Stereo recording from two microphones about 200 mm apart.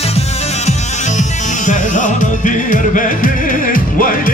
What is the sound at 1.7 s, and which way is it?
Music, 40° left (ahead or behind).